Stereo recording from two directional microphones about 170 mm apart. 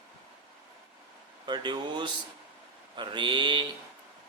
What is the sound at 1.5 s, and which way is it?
Speech, 25° right (ahead or behind).